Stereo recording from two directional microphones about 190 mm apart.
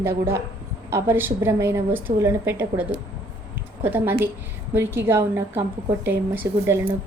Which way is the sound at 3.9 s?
10° right (ahead or behind).